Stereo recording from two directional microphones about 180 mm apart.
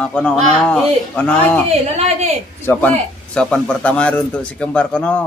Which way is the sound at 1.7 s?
35° right (ahead or behind).